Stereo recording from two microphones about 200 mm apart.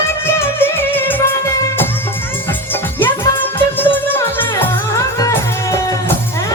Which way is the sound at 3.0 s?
10° left (ahead or behind).